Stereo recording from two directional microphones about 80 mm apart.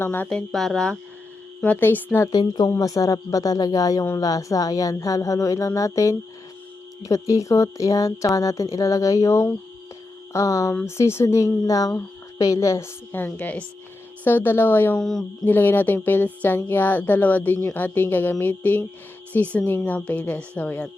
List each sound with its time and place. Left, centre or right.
0.0 s speech: left
0.3 s speech: centre
1.6 s speech: left
2.3 s speech: left
2.6 s speech: left
13.3 s speech: centre
14.3 s speech: left
14.9 s speech: centre
15.4 s speech: left